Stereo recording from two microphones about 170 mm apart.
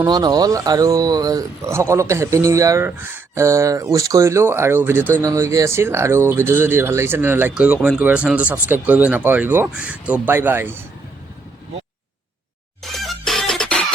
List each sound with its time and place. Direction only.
0.0 s speech: 25° right (ahead or behind)
12.8 s music: centre (ahead or behind)